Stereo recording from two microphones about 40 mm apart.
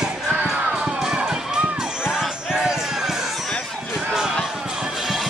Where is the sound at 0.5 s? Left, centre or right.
Centre.